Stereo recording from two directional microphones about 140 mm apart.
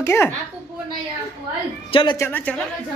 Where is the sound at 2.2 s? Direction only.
15° left (ahead or behind).